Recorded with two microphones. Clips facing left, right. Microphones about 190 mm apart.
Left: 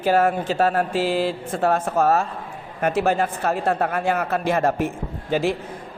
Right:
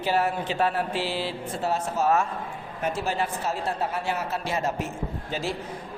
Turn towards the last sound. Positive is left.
turn(degrees=55)  # may be behind; listen again after turning